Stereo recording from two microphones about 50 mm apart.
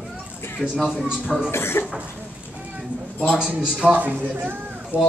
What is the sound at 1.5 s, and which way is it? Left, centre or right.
Speech, left.